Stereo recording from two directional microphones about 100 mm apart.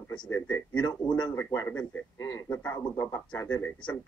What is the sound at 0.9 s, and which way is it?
Speech, 45° left (ahead or behind).